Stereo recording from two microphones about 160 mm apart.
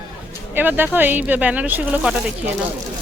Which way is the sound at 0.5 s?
10° right (ahead or behind).